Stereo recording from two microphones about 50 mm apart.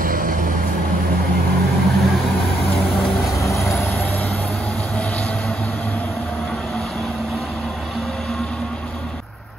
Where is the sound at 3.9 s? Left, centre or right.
Left.